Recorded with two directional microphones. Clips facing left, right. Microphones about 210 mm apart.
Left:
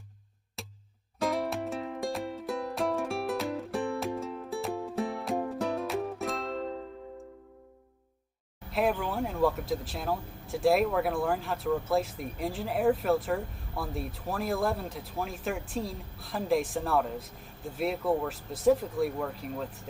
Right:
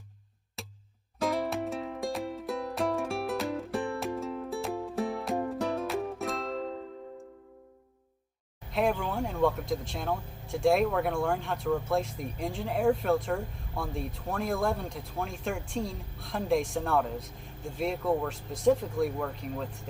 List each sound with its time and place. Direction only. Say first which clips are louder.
0.6 s music: even; centre (ahead or behind)
8.7 s speech: even; centre (ahead or behind)